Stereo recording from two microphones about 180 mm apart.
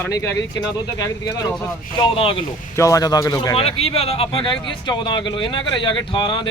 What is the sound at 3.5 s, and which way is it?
Speech, 35° left (ahead or behind).